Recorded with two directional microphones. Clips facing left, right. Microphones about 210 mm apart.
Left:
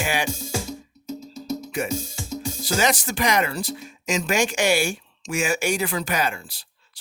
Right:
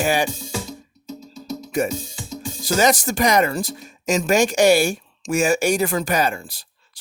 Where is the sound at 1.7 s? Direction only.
45° right (ahead or behind).